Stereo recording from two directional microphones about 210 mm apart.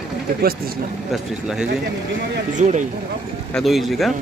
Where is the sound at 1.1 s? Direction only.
5° right (ahead or behind).